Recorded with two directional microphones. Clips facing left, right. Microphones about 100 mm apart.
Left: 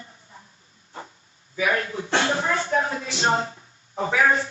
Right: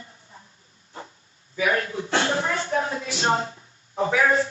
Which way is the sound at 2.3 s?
25° left (ahead or behind).